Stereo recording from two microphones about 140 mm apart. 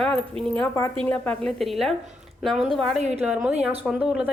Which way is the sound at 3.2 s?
10° right (ahead or behind).